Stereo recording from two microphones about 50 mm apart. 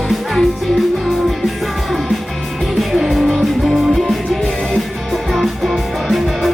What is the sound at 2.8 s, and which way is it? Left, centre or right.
Music, centre.